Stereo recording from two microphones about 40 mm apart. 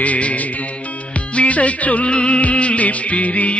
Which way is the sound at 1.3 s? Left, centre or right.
Left.